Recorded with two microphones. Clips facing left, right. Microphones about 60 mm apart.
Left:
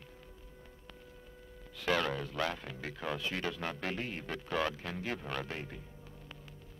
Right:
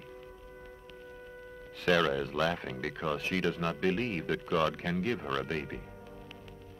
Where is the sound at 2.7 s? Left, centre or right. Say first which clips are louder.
Right 5 dB; right.